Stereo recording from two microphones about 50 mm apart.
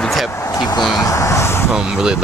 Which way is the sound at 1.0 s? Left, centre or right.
Left.